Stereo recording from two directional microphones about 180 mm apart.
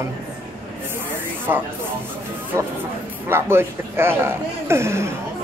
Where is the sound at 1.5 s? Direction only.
15° right (ahead or behind).